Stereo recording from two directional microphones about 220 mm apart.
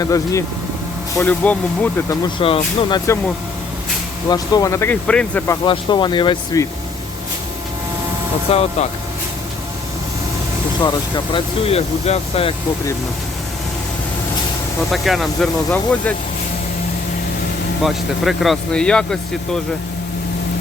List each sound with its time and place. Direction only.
0.0 s speech: 15° left (ahead or behind)
2.2 s speech: 20° left (ahead or behind)
4.3 s speech: 15° left (ahead or behind)
5.6 s speech: 20° left (ahead or behind)
8.4 s speech: 25° left (ahead or behind)
11.3 s speech: 25° left (ahead or behind)
14.9 s speech: centre (ahead or behind)
17.8 s speech: centre (ahead or behind)